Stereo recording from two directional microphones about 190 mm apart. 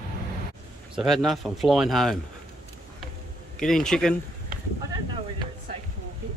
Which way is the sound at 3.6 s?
5° left (ahead or behind).